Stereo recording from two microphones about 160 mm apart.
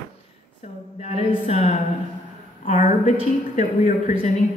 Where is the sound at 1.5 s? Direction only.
40° left (ahead or behind).